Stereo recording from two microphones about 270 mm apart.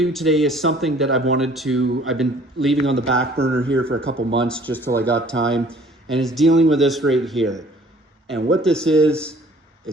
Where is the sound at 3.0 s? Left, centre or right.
Right.